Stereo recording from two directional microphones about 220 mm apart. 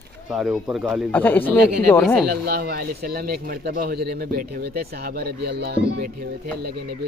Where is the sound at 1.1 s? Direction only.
10° left (ahead or behind).